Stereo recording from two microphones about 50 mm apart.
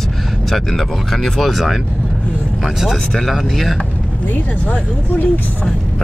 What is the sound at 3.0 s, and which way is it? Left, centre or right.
Speech, centre.